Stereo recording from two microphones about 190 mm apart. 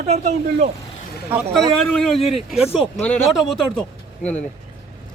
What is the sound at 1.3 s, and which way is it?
Speech, 10° right (ahead or behind).